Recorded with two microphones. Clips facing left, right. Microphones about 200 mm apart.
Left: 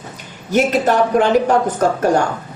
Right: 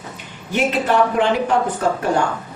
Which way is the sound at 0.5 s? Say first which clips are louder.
Left 3 dB; 40° left (ahead or behind).